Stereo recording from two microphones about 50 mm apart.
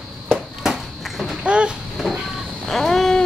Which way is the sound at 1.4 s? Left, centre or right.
Right.